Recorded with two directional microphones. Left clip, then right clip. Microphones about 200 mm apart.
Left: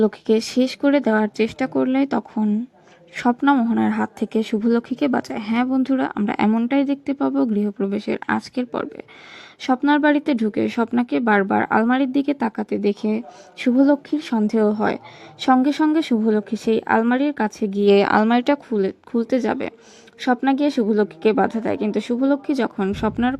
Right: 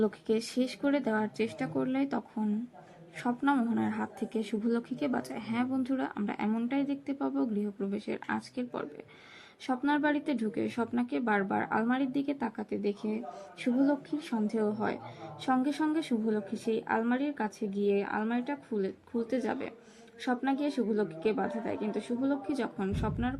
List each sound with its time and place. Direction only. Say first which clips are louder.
0.0 s speech: left 11 dB; 40° left (ahead or behind)